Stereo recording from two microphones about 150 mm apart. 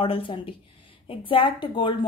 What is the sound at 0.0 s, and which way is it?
A woman's voice, 35° left (ahead or behind).